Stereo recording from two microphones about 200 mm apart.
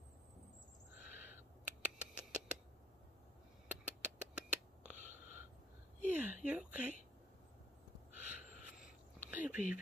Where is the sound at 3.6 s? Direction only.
5° right (ahead or behind).